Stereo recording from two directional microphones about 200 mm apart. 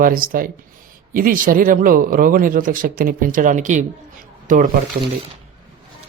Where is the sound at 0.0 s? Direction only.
45° right (ahead or behind).